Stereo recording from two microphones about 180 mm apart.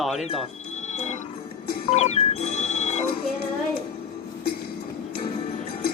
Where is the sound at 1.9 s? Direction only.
35° left (ahead or behind).